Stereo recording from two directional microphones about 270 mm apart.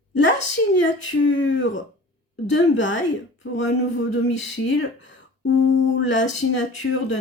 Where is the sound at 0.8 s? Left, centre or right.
Left.